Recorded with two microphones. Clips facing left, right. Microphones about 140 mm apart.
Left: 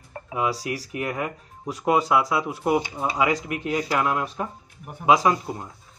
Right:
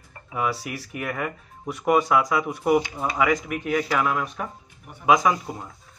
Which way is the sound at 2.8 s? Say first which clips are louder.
Even; 20° left (ahead or behind).